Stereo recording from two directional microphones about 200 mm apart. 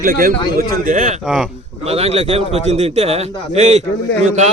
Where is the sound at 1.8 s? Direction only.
30° right (ahead or behind).